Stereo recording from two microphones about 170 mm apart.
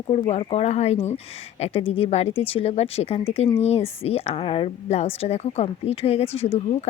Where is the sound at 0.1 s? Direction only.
35° left (ahead or behind).